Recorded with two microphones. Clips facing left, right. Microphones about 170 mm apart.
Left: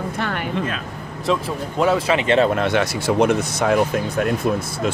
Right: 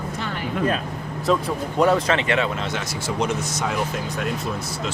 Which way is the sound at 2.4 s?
55° left (ahead or behind).